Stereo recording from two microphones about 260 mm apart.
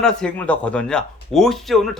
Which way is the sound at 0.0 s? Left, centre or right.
Centre.